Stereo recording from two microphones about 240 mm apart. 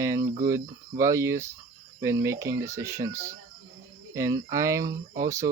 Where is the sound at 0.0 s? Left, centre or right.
Centre.